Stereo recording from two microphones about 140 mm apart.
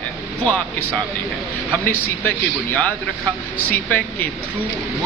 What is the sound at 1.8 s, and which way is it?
Speech, 15° left (ahead or behind).